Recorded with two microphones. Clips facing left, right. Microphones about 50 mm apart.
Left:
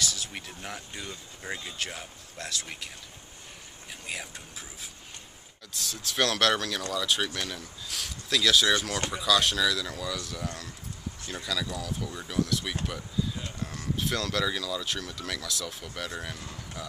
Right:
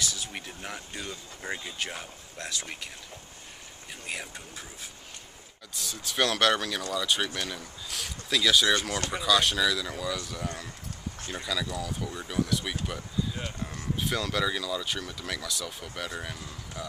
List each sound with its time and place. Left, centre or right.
0.0 s speech: centre
4.1 s speech: centre
5.7 s speech: centre
13.9 s speech: centre